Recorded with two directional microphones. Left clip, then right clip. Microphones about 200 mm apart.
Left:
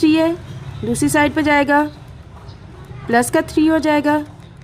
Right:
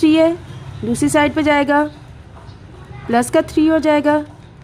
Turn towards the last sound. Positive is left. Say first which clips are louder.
# right 2 dB
turn(degrees=-5)  # may be behind; listen again after turning